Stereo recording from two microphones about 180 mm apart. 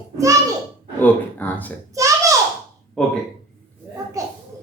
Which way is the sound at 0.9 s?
10° left (ahead or behind).